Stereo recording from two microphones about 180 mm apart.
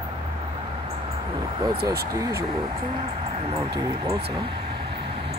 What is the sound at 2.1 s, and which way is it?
Speech, 20° right (ahead or behind).